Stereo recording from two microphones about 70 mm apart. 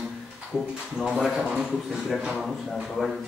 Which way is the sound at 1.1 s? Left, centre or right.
Centre.